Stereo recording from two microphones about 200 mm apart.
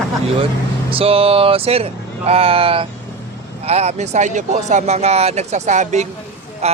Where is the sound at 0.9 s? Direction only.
30° right (ahead or behind).